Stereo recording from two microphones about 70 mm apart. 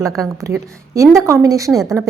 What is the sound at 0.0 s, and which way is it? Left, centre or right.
Speech, right.